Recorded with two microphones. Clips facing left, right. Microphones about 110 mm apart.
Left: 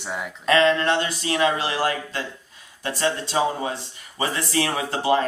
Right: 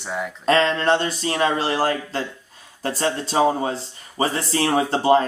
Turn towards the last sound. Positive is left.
turn(degrees=-35)  # may be behind; listen again after turning